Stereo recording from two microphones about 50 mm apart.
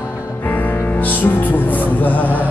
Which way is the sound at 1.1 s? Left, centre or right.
Left.